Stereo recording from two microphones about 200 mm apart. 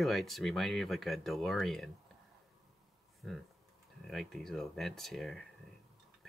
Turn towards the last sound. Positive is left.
turn(degrees=0)  # may be behind; listen again after turning